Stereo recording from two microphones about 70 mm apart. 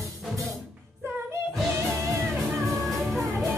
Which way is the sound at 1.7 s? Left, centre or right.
Right.